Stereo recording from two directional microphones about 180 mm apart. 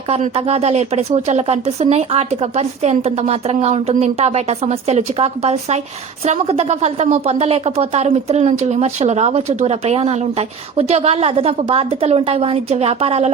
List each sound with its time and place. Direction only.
0.1 s a woman's voice: 35° right (ahead or behind)